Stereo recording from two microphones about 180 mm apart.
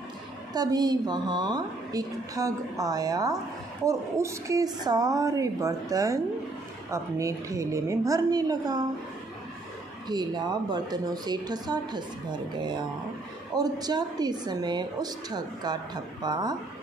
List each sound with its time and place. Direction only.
0.5 s a woman's voice: 20° right (ahead or behind)
10.0 s a woman's voice: 25° right (ahead or behind)